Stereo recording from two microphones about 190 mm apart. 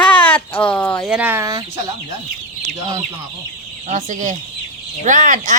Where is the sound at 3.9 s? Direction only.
40° right (ahead or behind).